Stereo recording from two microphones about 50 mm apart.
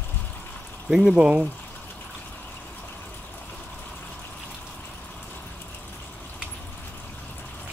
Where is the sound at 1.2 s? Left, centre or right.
Right.